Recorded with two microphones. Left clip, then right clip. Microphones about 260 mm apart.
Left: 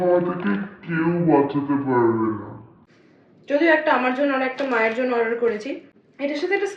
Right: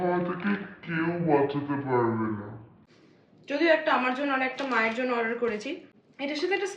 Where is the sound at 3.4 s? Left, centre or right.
Centre.